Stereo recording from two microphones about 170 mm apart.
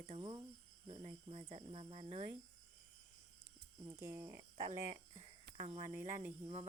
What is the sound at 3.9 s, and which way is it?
Speech, 15° right (ahead or behind).